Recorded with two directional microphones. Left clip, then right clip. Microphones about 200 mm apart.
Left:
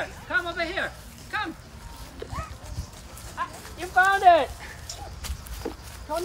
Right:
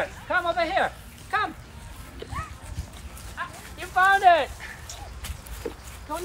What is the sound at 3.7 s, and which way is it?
Speech, 55° left (ahead or behind).